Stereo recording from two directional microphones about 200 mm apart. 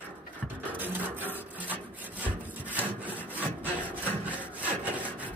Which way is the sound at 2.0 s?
10° right (ahead or behind).